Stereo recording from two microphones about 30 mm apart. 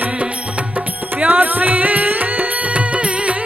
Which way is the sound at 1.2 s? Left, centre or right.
Right.